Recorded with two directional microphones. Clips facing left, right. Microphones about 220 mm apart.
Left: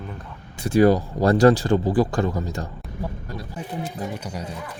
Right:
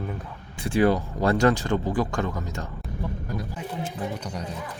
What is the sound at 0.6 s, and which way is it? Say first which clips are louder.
Speech: left 5 dB; 40° left (ahead or behind).